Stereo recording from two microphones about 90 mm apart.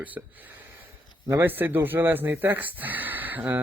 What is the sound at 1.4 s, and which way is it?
Speech, 20° right (ahead or behind).